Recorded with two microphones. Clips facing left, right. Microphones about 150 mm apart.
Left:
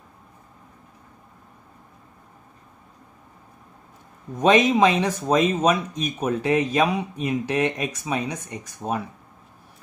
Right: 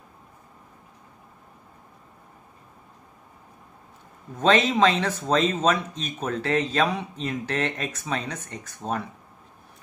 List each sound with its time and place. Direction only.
4.4 s speech: 15° left (ahead or behind)